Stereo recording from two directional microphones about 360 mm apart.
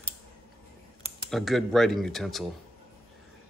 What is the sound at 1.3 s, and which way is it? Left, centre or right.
A man's voice, centre.